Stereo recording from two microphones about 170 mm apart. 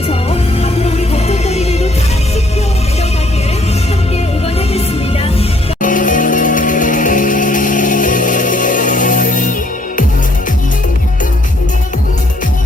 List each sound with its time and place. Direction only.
0.1 s music: 35° left (ahead or behind)
5.8 s music: 50° left (ahead or behind)